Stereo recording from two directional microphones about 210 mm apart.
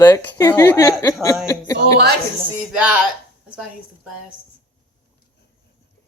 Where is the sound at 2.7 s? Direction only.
5° right (ahead or behind).